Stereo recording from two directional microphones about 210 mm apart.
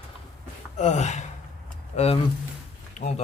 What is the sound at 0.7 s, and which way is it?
Speech, 35° left (ahead or behind).